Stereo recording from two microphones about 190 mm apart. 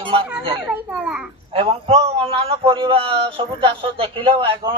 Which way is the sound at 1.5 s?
30° right (ahead or behind).